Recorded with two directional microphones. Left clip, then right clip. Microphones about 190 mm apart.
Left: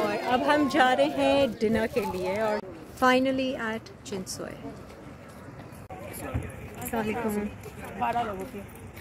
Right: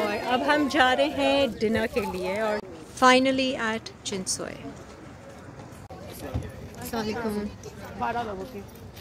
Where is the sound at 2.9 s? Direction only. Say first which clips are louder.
Right 4 dB; 10° right (ahead or behind).